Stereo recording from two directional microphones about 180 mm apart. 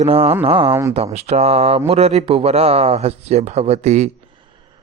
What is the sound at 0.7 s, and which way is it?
Speech, 15° right (ahead or behind).